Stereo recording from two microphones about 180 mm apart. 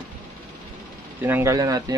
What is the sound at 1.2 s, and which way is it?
Speech, 15° right (ahead or behind).